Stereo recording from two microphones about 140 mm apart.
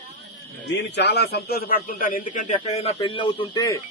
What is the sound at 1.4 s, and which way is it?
A man's voice, 90° left.